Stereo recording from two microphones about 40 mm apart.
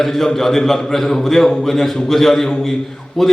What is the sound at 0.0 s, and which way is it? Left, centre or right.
A man's voice, centre.